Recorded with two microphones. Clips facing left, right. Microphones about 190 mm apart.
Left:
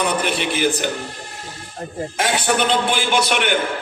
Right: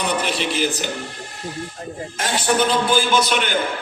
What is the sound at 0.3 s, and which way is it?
Speech, 55° left (ahead or behind).